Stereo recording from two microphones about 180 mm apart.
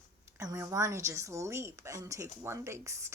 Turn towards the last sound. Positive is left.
turn(degrees=-15)  # may be behind; listen again after turning